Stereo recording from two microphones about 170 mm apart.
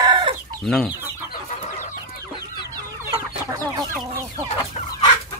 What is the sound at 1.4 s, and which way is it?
Chicken, 45° left (ahead or behind).